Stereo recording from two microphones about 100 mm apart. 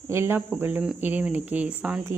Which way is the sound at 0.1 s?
25° right (ahead or behind).